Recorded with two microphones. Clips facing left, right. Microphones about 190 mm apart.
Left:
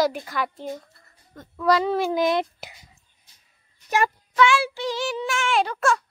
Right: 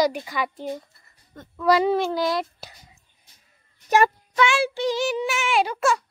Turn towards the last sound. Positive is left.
turn(degrees=-5)  # may be behind; listen again after turning